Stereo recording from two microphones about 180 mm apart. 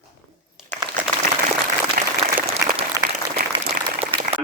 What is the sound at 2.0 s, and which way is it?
Applause, 45° right (ahead or behind).